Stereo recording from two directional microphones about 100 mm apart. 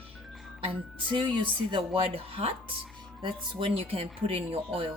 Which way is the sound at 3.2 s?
55° right (ahead or behind).